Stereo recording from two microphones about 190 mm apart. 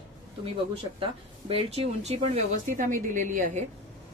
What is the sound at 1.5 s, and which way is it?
A woman's voice, 30° right (ahead or behind).